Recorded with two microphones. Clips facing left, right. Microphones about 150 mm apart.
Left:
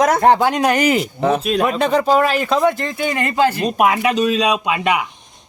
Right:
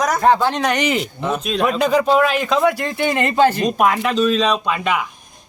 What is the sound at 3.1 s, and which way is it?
Speech, 20° right (ahead or behind).